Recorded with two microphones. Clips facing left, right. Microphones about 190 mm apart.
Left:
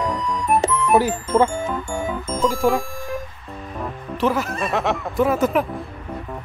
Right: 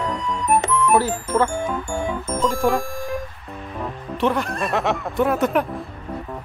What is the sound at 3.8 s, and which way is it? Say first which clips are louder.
Speech: even; centre (ahead or behind).